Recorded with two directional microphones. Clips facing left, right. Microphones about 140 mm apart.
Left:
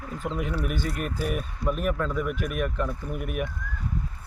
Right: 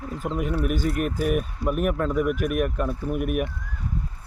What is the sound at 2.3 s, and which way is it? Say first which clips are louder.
Speech: right 6 dB; 55° right (ahead or behind).